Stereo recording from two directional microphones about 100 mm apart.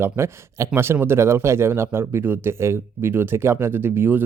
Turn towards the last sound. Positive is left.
turn(degrees=-20)  # may be behind; listen again after turning